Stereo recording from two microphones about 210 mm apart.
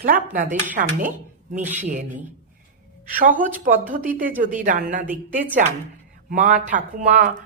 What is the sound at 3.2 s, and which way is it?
Speech, 40° right (ahead or behind).